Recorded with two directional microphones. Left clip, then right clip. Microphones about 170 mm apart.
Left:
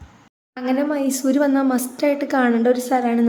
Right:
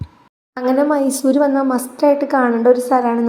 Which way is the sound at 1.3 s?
25° left (ahead or behind).